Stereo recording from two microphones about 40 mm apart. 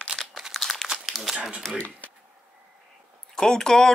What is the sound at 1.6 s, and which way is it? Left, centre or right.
Speech, centre.